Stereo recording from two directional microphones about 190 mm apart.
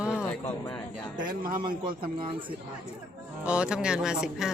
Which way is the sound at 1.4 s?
50° right (ahead or behind).